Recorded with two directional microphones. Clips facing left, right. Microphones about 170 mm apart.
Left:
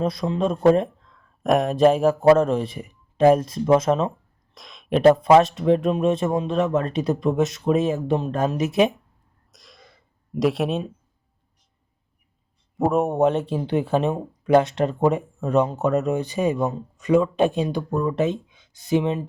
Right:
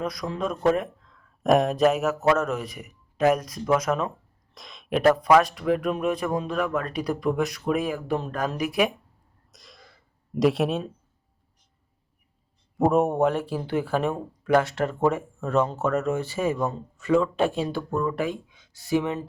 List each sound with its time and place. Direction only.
0.0 s speech: 25° left (ahead or behind)
1.4 s speech: centre (ahead or behind)
1.8 s speech: 30° left (ahead or behind)
4.5 s a sound: centre (ahead or behind)
4.9 s speech: 25° left (ahead or behind)
9.5 s cough: centre (ahead or behind)
10.3 s speech: centre (ahead or behind)
12.7 s a man's voice: centre (ahead or behind)
13.1 s speech: 20° left (ahead or behind)